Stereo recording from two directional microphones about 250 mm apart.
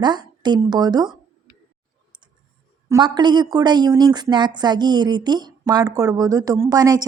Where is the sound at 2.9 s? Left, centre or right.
Centre.